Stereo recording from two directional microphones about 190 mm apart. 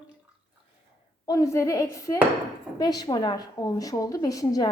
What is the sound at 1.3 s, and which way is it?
A woman's voice, 15° left (ahead or behind).